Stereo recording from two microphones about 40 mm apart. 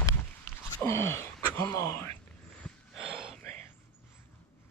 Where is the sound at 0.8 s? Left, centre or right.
Left.